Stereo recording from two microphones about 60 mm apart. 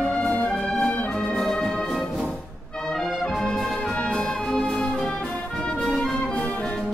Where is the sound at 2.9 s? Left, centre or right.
Centre.